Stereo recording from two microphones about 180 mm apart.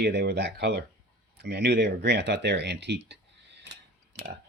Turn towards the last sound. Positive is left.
turn(degrees=-75)  # may be behind; listen again after turning